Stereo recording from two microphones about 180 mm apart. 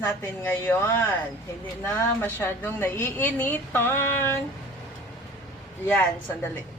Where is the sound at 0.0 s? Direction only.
10° left (ahead or behind).